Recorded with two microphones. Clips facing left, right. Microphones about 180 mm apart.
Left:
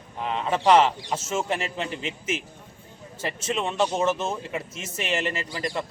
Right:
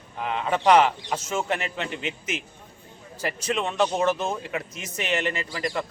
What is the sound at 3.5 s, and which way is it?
A man's voice, 5° left (ahead or behind).